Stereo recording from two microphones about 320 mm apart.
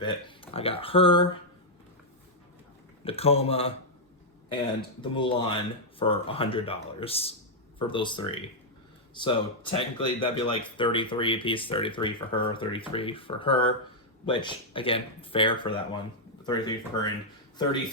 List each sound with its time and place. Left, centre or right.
0.0 s speech: centre
3.0 s speech: centre
4.9 s speech: centre